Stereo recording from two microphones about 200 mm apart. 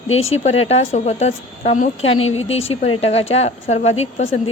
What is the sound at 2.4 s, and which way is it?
A man's voice, 30° left (ahead or behind).